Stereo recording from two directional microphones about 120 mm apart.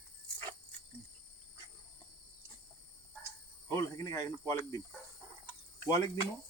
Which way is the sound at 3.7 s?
25° left (ahead or behind).